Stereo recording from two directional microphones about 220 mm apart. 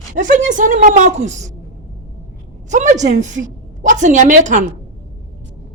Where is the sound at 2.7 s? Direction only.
35° right (ahead or behind).